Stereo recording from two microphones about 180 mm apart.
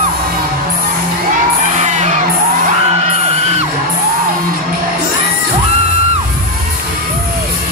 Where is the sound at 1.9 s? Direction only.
40° right (ahead or behind).